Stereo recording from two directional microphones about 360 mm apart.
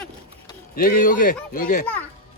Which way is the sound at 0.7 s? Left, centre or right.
Left.